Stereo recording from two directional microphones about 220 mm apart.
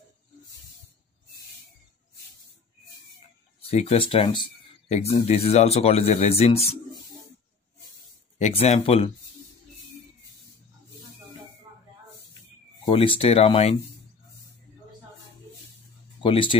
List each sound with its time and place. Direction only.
3.6 s speech: 30° left (ahead or behind)
8.4 s speech: 30° left (ahead or behind)
12.8 s speech: 25° left (ahead or behind)
16.2 s speech: 25° left (ahead or behind)